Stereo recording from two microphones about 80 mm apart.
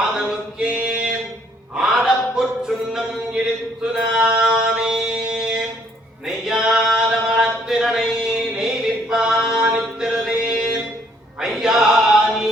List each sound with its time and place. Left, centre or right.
0.0 s a sound: centre
9.6 s mantra: centre
11.3 s choir: centre